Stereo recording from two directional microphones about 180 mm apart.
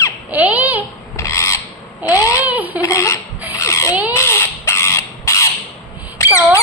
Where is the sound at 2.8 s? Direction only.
15° left (ahead or behind).